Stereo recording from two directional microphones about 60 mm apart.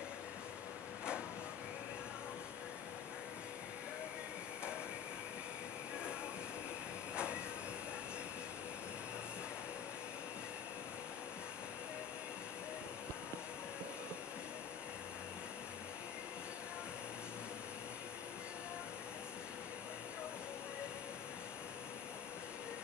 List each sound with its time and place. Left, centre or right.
7.2 s train: centre